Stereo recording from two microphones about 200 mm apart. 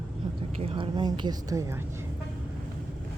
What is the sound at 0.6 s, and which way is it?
A woman's voice, 25° right (ahead or behind).